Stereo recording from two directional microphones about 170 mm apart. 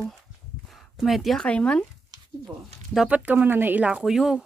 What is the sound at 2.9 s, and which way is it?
Speech, 5° right (ahead or behind).